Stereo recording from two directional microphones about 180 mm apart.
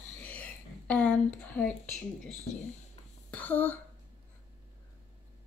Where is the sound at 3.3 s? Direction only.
10° left (ahead or behind).